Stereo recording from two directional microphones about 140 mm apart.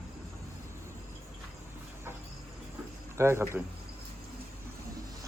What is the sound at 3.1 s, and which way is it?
Speech, 20° right (ahead or behind).